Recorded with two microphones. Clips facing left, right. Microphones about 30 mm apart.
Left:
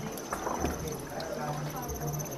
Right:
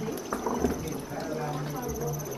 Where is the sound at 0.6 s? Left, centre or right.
Left.